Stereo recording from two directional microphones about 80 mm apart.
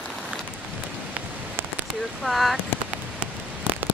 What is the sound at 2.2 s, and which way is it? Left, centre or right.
Speech, centre.